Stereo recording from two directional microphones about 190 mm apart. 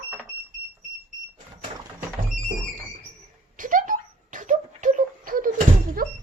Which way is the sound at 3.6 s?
45° right (ahead or behind).